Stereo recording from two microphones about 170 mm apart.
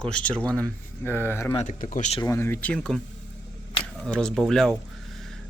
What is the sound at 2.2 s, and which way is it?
Speech, 15° left (ahead or behind).